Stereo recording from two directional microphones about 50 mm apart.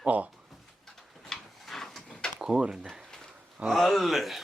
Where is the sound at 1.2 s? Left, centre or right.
Centre.